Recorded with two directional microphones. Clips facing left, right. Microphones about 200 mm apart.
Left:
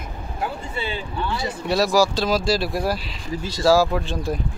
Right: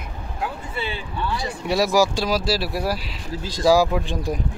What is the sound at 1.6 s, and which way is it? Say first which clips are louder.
Speech: even; 15° right (ahead or behind).